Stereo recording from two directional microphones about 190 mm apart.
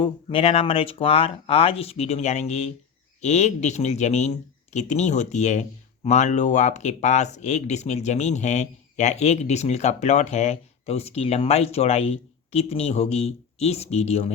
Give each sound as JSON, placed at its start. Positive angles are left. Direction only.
{"t": 0.0, "sound": "speech", "side_deg": 30}